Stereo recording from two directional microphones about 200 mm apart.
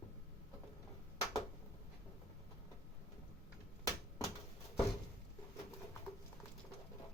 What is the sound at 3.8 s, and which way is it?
Typewriter, 15° left (ahead or behind).